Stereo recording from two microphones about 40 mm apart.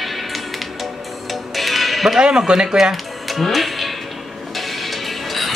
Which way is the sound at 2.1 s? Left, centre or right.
Centre.